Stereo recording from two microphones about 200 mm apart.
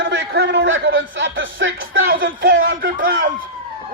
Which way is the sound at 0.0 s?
65° right (ahead or behind).